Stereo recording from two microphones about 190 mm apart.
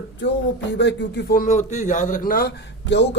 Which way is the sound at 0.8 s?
65° left (ahead or behind).